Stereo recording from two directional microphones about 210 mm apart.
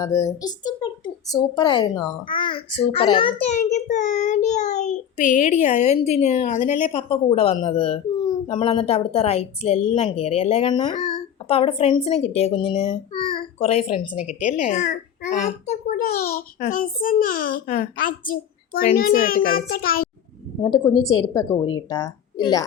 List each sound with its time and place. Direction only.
0.0 s a child's voice: 15° left (ahead or behind)
3.5 s child singing: 35° left (ahead or behind)
14.4 s a child's voice: 35° left (ahead or behind)
20.6 s a woman's voice: 20° left (ahead or behind)